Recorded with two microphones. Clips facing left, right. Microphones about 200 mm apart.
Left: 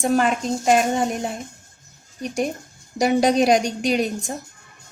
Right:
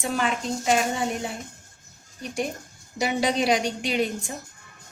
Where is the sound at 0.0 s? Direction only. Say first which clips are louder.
Left 7 dB; 45° left (ahead or behind).